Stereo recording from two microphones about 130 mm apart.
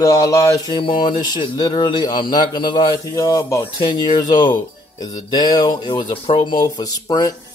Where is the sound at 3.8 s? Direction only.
35° left (ahead or behind).